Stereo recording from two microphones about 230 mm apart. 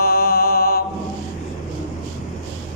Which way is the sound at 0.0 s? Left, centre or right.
Left.